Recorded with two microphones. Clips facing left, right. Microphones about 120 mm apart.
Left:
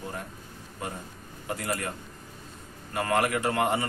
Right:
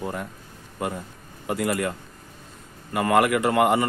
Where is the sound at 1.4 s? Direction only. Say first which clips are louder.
Right 7 dB; 90° right.